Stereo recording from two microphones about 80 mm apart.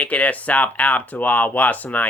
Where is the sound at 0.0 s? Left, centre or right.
Centre.